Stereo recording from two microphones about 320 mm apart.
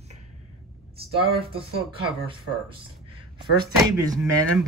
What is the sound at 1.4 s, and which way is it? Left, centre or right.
Speech, centre.